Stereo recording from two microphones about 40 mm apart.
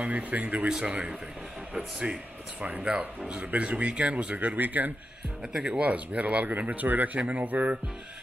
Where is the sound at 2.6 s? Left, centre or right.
Right.